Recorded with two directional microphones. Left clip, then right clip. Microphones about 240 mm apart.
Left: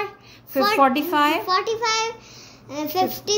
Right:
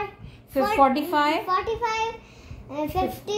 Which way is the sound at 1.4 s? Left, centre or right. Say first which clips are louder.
Left 3 dB; left.